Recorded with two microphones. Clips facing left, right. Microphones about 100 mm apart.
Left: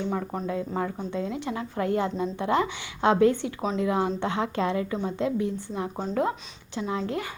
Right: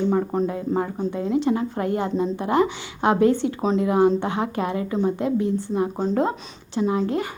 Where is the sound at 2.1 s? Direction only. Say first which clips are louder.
Right 5 dB; 35° right (ahead or behind).